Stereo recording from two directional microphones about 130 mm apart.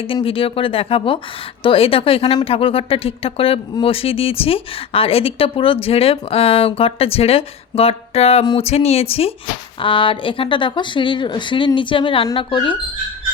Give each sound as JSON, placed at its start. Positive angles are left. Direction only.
{"t": 0.0, "sound": "speech", "side_deg": 45}